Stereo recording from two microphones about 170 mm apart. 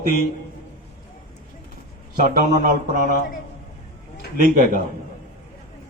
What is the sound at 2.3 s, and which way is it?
Speech, 55° right (ahead or behind).